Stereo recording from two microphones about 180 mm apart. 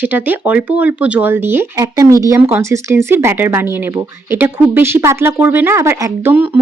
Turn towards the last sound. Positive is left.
turn(degrees=-10)  # may be behind; listen again after turning